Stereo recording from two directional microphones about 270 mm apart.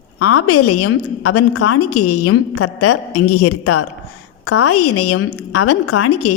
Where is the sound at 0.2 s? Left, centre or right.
Left.